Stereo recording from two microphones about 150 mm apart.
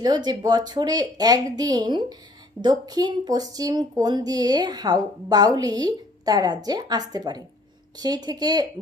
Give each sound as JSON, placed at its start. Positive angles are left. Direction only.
{"t": 0.0, "sound": "speech", "side_deg": -30}